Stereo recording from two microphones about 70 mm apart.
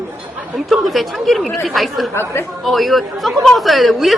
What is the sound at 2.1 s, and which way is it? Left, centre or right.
Speech, left.